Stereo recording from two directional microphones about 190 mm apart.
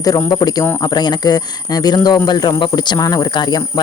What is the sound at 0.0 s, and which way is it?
Speech, 20° left (ahead or behind).